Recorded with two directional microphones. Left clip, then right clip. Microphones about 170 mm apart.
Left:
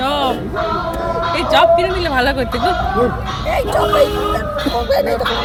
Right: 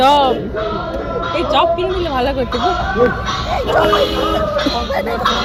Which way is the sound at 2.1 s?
10° left (ahead or behind).